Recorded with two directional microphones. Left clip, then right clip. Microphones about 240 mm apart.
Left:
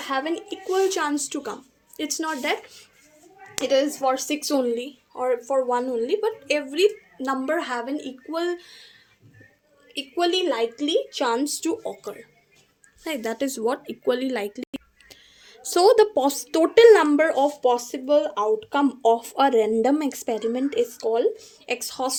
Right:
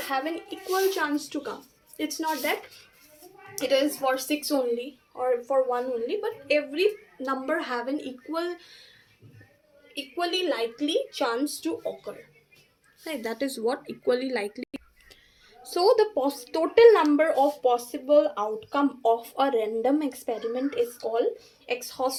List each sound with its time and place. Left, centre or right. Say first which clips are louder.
0.1 s speech: left 4 dB; left
3.6 s speech: left 3 dB; left
9.9 s speech: left 5 dB; left
13.1 s speech: left 4 dB; left
15.1 s speech: left 6 dB; left